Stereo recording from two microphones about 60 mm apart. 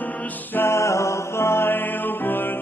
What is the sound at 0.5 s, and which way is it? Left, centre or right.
Music, left.